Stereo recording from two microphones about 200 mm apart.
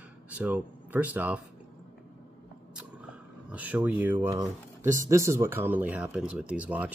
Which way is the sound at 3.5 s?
5° right (ahead or behind).